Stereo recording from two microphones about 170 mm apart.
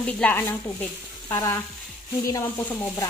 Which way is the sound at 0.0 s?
10° left (ahead or behind).